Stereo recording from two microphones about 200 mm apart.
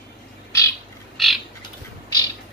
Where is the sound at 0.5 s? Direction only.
15° left (ahead or behind).